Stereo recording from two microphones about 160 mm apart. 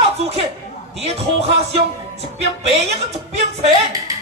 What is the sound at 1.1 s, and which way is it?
Speech, 40° right (ahead or behind).